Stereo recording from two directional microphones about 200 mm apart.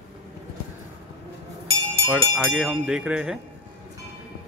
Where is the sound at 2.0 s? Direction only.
Centre (ahead or behind).